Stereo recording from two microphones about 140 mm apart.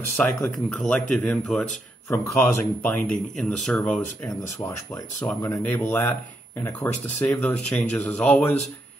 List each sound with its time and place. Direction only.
0.2 s speech: 10° left (ahead or behind)
2.0 s speech: 15° left (ahead or behind)
4.6 s speech: 25° left (ahead or behind)
5.2 s speech: 10° left (ahead or behind)